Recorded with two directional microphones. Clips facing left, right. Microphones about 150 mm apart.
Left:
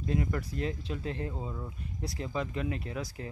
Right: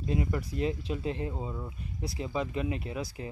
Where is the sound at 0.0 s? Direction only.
20° right (ahead or behind).